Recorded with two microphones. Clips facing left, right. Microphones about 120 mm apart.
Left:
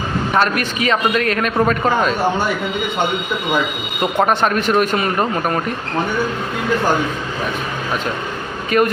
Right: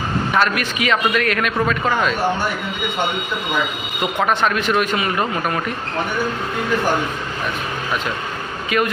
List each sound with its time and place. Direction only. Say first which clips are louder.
0.3 s a man's voice: left 2 dB; 40° left (ahead or behind)
4.0 s a man's voice: left 3 dB; 35° left (ahead or behind)
8.7 s a man's voice: left 4 dB; 40° left (ahead or behind)